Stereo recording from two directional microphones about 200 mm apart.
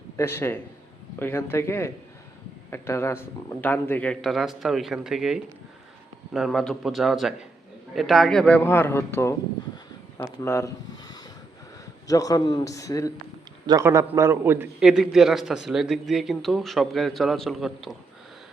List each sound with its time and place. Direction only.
0.2 s a man's voice: 10° left (ahead or behind)
12.0 s a man's voice: 15° left (ahead or behind)
13.7 s a man's voice: 15° right (ahead or behind)